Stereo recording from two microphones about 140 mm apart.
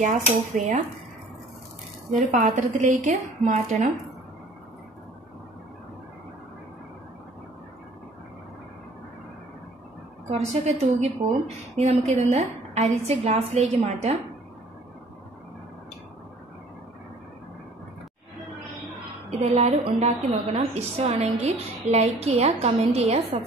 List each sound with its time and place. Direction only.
0.0 s a woman's voice: 60° right (ahead or behind)
2.1 s a woman's voice: 60° right (ahead or behind)
10.3 s a woman's voice: 50° right (ahead or behind)
19.4 s a woman's voice: 50° right (ahead or behind)